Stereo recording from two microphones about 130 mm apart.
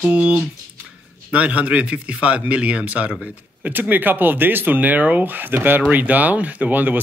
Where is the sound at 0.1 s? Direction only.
10° right (ahead or behind).